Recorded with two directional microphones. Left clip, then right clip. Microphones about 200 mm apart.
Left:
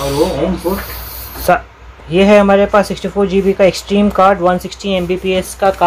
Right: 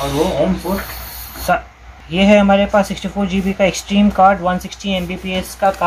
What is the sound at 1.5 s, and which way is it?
Speech, 25° left (ahead or behind).